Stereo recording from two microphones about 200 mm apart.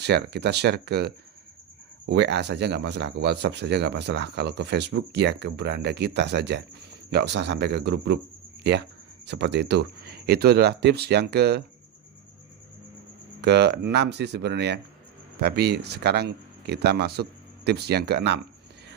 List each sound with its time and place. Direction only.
0.0 s speech: 55° right (ahead or behind)
9.2 s speech: 60° right (ahead or behind)
13.4 s speech: 60° right (ahead or behind)